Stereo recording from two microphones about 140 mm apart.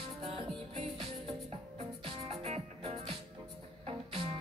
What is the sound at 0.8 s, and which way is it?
Music, 45° right (ahead or behind).